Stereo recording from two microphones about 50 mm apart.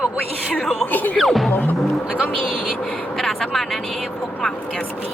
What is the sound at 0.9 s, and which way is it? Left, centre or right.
Speech, left.